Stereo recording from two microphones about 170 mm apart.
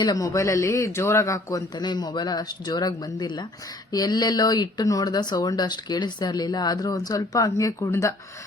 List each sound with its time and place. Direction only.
0.0 s speech: 20° left (ahead or behind)